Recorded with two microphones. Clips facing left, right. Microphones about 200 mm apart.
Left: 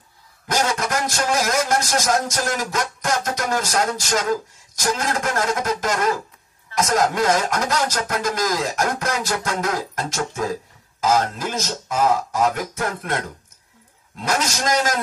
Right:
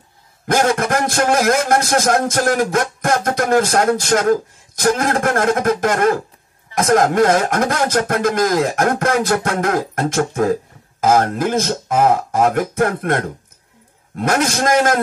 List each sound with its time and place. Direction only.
0.5 s speech: 55° right (ahead or behind)